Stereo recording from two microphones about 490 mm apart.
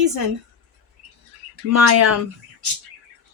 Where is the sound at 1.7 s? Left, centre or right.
Right.